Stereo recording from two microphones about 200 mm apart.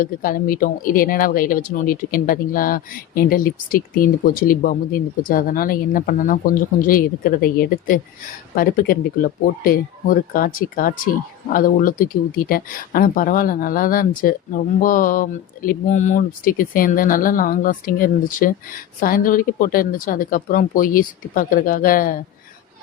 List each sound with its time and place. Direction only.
0.0 s speech: 45° left (ahead or behind)